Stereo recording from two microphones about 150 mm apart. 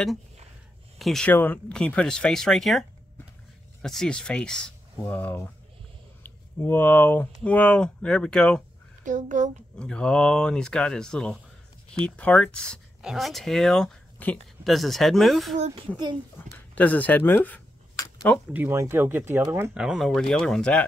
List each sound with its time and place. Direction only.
0.9 s speech: centre (ahead or behind)
1.3 s speech: 15° left (ahead or behind)
3.8 s speech: 5° left (ahead or behind)
9.0 s a woman's voice: 60° right (ahead or behind)
9.8 s speech: 5° left (ahead or behind)
15.5 s speech: 50° right (ahead or behind)
16.5 s a sound: 10° left (ahead or behind)
18.5 s speech: 15° right (ahead or behind)
19.8 s speech: 5° right (ahead or behind)